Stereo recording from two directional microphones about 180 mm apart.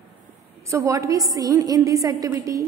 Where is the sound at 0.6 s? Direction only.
15° right (ahead or behind).